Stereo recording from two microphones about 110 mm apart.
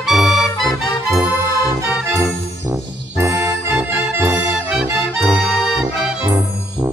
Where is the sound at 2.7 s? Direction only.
25° right (ahead or behind).